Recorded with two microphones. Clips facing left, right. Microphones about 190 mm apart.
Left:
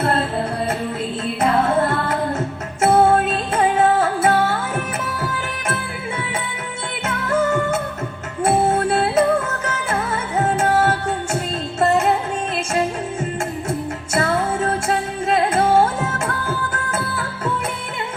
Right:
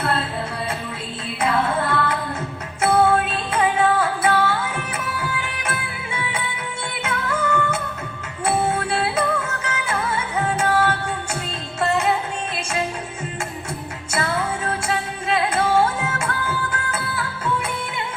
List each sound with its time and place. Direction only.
1.4 s music: 45° left (ahead or behind)
7.0 s music: 50° left (ahead or behind)
13.7 s music: 50° left (ahead or behind)